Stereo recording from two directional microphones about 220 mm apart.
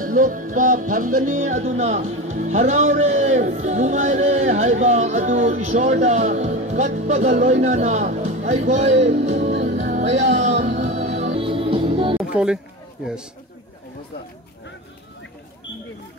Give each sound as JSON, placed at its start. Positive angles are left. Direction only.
{"t": 0.0, "sound": "music", "side_deg": -40}
{"t": 12.2, "sound": "music", "side_deg": -5}
{"t": 13.0, "sound": "a man's voice", "side_deg": -5}